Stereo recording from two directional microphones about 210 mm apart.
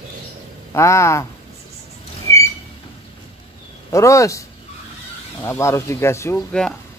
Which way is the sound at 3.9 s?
15° left (ahead or behind).